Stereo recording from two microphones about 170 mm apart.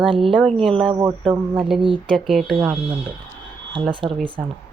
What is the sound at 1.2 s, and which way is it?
Speech, 5° left (ahead or behind).